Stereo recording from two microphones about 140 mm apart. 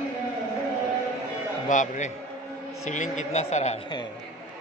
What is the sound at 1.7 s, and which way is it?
Speech, 60° left (ahead or behind).